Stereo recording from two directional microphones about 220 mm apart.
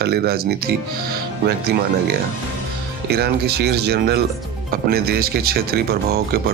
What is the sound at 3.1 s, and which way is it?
Speech, 45° right (ahead or behind).